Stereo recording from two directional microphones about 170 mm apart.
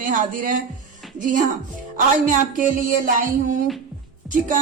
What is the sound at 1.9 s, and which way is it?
Music, 50° right (ahead or behind).